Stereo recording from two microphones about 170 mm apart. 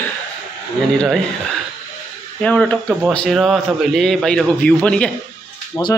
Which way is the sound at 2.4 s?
5° left (ahead or behind).